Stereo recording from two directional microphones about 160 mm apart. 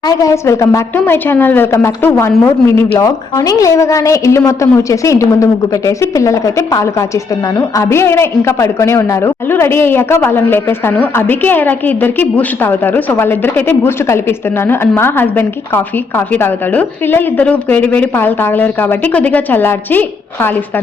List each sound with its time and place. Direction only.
0.0 s a woman's voice: 20° left (ahead or behind)